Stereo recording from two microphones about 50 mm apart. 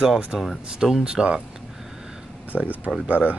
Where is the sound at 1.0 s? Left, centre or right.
Centre.